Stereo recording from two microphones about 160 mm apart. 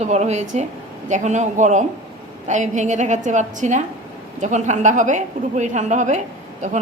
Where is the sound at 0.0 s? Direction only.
45° right (ahead or behind).